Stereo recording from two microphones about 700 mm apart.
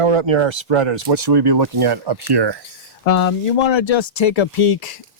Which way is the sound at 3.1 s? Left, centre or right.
Left.